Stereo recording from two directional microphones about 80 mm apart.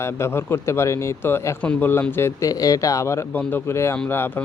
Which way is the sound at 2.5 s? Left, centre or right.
Left.